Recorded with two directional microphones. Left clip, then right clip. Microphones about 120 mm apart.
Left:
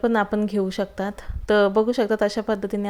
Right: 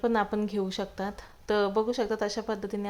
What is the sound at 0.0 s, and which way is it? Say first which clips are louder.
Speech: left 6 dB; 35° left (ahead or behind).